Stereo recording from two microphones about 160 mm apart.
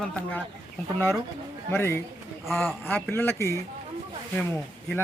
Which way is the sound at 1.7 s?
15° left (ahead or behind).